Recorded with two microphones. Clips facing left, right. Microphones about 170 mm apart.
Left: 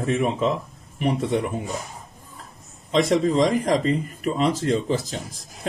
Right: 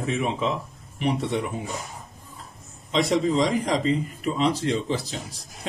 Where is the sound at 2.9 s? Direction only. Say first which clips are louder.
Left 3 dB; 45° left (ahead or behind).